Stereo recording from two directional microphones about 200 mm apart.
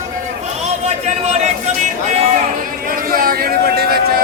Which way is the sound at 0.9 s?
35° right (ahead or behind).